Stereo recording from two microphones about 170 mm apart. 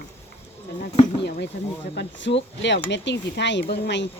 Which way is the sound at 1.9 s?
90° left.